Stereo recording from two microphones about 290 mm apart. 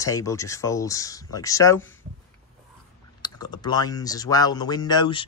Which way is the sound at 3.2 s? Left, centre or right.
Centre.